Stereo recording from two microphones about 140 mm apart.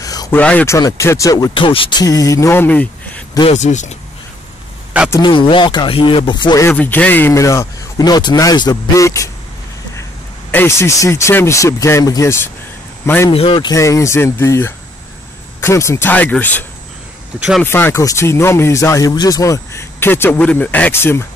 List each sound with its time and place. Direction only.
0.0 s a sound: 25° left (ahead or behind)
0.3 s speech: 10° left (ahead or behind)
0.7 s speech: 25° left (ahead or behind)
1.5 s speech: 40° left (ahead or behind); by 3.3 s 10° left (ahead or behind)
3.4 s speech: 55° left (ahead or behind)
5.2 s speech: 35° left (ahead or behind)
6.7 s speech: 10° left (ahead or behind)
10.5 s speech: 15° left (ahead or behind)
13.3 s speech: 40° left (ahead or behind)
13.7 s speech: 20° left (ahead or behind)
17.4 s speech: 5° right (ahead or behind)
17.6 s speech: 15° left (ahead or behind)